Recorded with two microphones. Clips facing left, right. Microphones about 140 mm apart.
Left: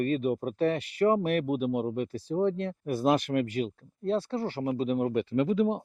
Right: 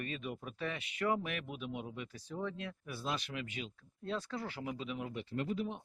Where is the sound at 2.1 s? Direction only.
35° left (ahead or behind); by 3.7 s 50° left (ahead or behind).